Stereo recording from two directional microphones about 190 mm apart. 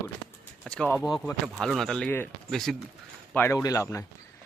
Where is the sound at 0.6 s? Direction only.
5° left (ahead or behind).